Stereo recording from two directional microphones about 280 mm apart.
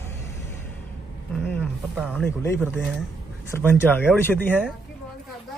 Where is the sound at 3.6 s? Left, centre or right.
Centre.